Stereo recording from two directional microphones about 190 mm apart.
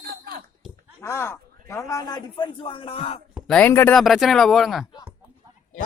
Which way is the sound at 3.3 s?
Centre (ahead or behind).